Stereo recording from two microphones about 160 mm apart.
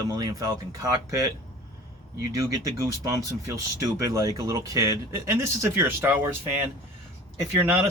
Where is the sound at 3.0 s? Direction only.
20° right (ahead or behind).